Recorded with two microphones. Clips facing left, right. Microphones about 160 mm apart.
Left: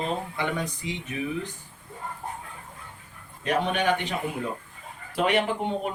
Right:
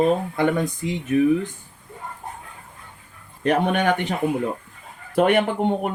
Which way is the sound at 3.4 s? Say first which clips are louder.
Right 5 dB; 55° right (ahead or behind).